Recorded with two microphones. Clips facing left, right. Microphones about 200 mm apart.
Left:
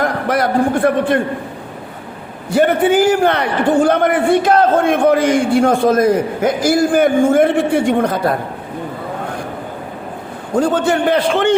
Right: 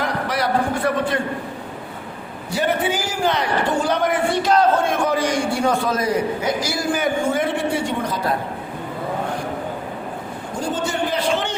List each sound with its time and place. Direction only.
0.0 s a man's voice: 50° left (ahead or behind)
2.6 s a man's voice: 55° left (ahead or behind)
10.5 s a man's voice: 60° left (ahead or behind)